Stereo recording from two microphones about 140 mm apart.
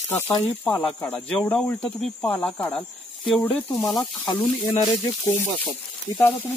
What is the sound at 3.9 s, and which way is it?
Speech, centre (ahead or behind).